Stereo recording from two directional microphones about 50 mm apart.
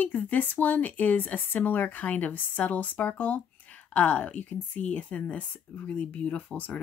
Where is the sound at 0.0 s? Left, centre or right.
Left.